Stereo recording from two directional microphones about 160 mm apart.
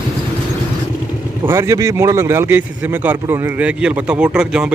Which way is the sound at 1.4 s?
15° right (ahead or behind).